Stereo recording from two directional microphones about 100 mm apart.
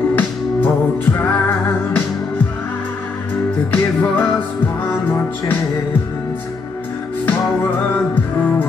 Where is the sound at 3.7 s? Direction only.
20° left (ahead or behind).